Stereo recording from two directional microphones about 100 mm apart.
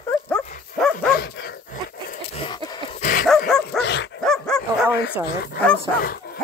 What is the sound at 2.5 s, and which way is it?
Dog, 45° left (ahead or behind).